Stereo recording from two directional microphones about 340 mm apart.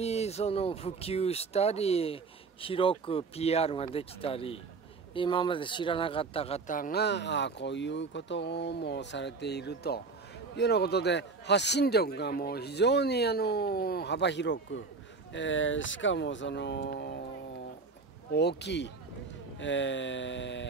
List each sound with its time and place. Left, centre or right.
0.0 s speech: centre
18.3 s speech: left